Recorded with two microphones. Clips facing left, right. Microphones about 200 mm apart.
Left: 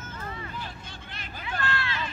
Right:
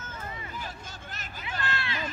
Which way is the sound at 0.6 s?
45° right (ahead or behind).